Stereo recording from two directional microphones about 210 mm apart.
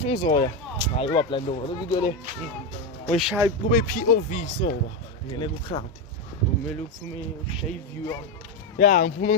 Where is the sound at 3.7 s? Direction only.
40° left (ahead or behind).